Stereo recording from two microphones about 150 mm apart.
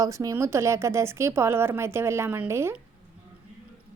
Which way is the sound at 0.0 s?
20° right (ahead or behind).